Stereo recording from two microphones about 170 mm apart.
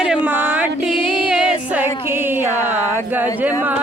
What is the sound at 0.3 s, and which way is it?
Music, 10° right (ahead or behind).